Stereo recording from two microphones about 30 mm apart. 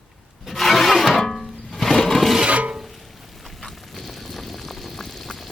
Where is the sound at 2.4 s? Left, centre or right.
Right.